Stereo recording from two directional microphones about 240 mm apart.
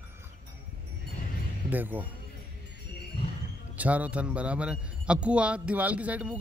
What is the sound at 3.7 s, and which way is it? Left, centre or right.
A man's voice, centre.